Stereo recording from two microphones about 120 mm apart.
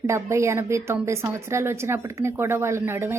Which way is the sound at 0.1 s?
25° right (ahead or behind).